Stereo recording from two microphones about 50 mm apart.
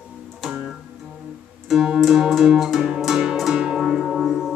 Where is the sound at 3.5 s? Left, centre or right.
Centre.